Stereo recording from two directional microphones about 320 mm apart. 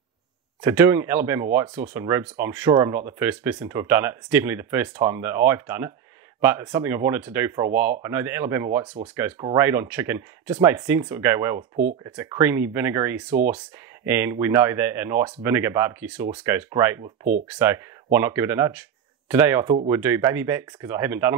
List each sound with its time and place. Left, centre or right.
0.6 s speech: centre
11.7 s speech: right
12.0 s speech: centre